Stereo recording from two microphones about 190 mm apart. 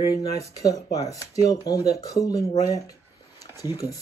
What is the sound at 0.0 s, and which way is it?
Speech, 20° left (ahead or behind).